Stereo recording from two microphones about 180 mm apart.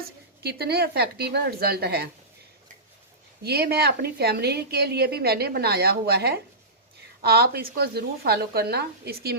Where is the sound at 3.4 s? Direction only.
60° right (ahead or behind).